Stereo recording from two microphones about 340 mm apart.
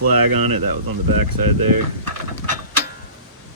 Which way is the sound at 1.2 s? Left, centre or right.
Right.